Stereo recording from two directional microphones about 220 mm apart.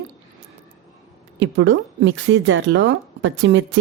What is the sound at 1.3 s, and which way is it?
Speech, 55° right (ahead or behind).